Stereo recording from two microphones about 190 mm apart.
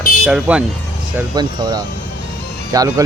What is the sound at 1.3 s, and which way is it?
Speech, 20° right (ahead or behind).